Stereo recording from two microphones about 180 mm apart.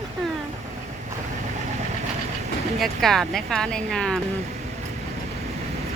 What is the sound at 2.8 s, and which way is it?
A woman's voice, centre (ahead or behind).